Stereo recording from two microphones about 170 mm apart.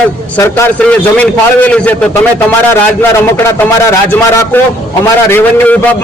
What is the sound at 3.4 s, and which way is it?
A man's voice, 15° left (ahead or behind).